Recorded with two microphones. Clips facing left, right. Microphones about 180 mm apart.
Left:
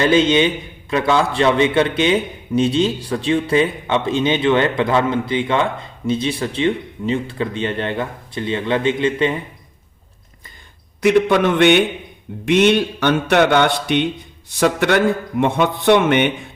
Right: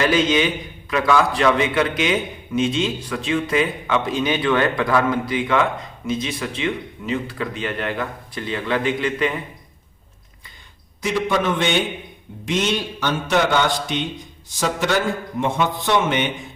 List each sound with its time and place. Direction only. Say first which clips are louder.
0.0 s a man's voice: left 4 dB; 25° left (ahead or behind)
11.0 s a man's voice: left 7 dB; 65° left (ahead or behind)